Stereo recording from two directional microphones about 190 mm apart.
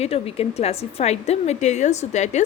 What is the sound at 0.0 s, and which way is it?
A woman's voice, 30° left (ahead or behind).